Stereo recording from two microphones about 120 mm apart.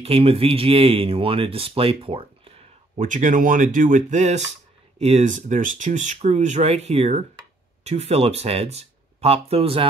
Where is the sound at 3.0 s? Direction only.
90° right.